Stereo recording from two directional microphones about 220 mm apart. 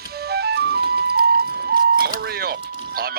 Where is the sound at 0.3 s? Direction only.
45° right (ahead or behind).